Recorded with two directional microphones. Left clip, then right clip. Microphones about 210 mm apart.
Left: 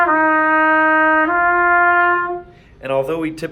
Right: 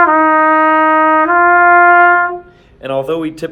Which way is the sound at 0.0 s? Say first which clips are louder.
Right 5 dB; 45° right (ahead or behind).